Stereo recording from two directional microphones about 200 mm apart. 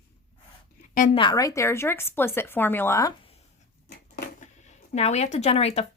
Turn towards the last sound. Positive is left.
turn(degrees=30)  # may be behind; listen again after turning